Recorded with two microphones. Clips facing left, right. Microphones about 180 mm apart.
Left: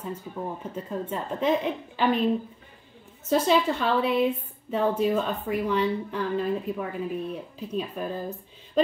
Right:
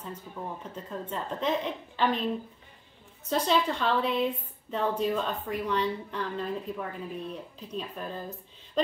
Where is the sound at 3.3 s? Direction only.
5° left (ahead or behind).